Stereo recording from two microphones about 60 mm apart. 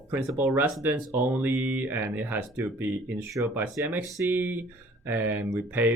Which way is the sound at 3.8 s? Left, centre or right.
Right.